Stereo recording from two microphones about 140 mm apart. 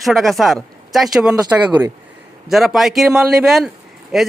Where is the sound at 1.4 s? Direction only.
20° right (ahead or behind).